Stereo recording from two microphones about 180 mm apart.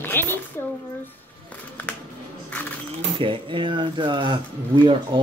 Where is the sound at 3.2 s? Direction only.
30° right (ahead or behind).